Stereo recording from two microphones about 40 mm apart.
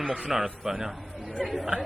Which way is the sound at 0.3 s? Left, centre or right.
Centre.